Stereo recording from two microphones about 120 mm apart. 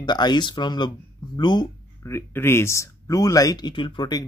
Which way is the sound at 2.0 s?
20° left (ahead or behind).